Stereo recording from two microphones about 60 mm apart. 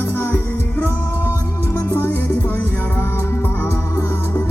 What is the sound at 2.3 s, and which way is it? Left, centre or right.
Music, left.